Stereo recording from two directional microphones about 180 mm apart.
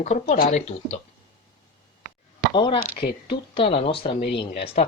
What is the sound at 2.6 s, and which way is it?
Speech, 25° left (ahead or behind).